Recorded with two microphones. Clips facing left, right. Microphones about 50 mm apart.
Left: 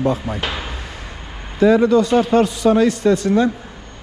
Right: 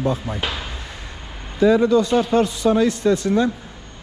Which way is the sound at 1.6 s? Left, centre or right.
Left.